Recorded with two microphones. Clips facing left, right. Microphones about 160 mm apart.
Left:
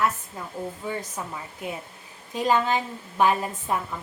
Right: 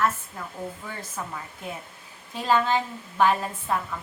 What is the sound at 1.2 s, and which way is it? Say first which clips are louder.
A woman's voice: left 1 dB; 20° left (ahead or behind).